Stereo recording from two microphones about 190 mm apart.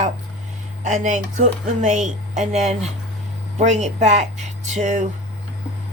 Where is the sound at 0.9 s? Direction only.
40° right (ahead or behind).